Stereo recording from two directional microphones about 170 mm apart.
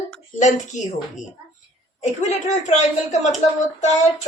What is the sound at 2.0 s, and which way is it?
A woman's voice, 40° left (ahead or behind).